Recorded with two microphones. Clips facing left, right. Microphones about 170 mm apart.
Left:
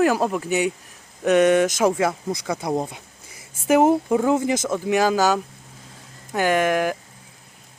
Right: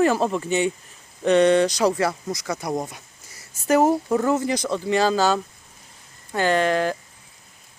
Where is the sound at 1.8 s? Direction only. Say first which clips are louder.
Left 1 dB; 20° left (ahead or behind).